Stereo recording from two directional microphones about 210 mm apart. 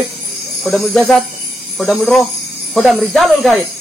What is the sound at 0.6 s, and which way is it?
Speech, centre (ahead or behind).